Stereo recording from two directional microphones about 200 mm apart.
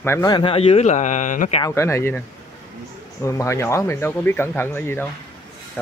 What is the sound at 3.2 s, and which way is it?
Speech, 15° left (ahead or behind).